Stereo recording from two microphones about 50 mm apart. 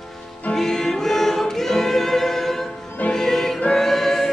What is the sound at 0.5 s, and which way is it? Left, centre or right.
Music, centre.